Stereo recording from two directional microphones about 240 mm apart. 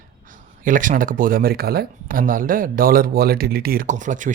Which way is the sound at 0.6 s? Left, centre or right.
Right.